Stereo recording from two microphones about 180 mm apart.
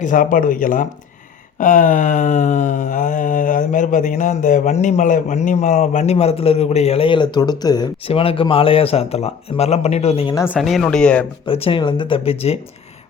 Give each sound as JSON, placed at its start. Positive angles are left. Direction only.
{"t": 0.0, "sound": "a sound", "side_deg": 50}
{"t": 7.6, "sound": "speech", "side_deg": 20}
{"t": 10.4, "sound": "speech", "side_deg": -5}
{"t": 11.4, "sound": "speech", "side_deg": 30}